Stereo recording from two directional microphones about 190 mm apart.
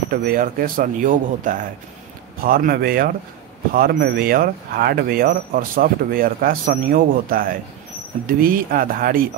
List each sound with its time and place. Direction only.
0.1 s speech: 50° right (ahead or behind)